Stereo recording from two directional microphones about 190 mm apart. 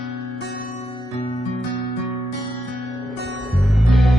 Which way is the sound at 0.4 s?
50° left (ahead or behind).